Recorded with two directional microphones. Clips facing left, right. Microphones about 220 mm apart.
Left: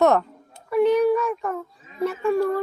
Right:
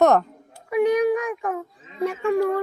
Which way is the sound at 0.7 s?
15° right (ahead or behind).